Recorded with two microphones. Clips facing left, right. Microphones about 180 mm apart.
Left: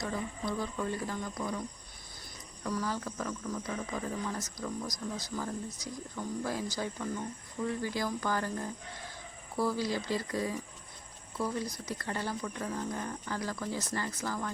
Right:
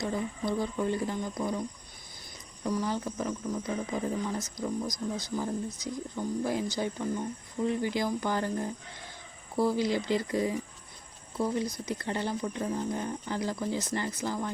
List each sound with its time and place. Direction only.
0.0 s speech: 25° right (ahead or behind)
2.6 s speech: 20° right (ahead or behind)